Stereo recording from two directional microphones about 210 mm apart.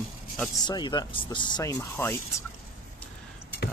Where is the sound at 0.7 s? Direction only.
20° left (ahead or behind).